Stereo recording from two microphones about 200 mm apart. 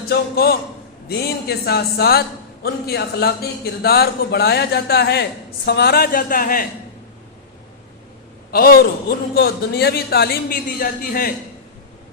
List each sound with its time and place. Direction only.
0.1 s a man's voice: 50° left (ahead or behind)
8.5 s a man's voice: 50° left (ahead or behind)